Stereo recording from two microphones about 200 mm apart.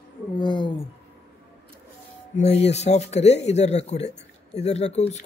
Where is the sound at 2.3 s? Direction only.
35° left (ahead or behind).